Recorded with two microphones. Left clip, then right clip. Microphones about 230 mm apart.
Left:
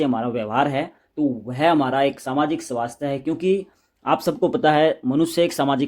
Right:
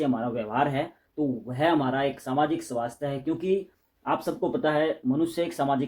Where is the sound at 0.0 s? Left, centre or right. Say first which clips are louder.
Left 5 dB; left.